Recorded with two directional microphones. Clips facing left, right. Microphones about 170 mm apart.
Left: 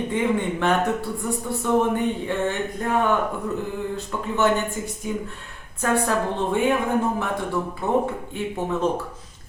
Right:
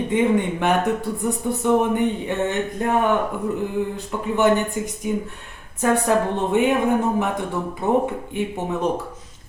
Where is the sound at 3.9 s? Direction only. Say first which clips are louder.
Right 2 dB; 15° right (ahead or behind).